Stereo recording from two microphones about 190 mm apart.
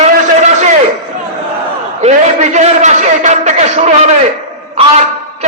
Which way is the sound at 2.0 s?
35° right (ahead or behind).